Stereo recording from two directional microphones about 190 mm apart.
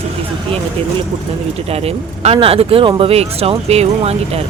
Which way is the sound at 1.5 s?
30° right (ahead or behind).